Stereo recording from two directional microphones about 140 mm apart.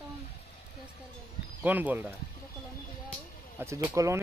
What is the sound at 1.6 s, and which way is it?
Speech, 10° right (ahead or behind).